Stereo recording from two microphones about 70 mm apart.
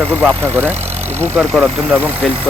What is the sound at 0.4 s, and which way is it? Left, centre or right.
Speech, right.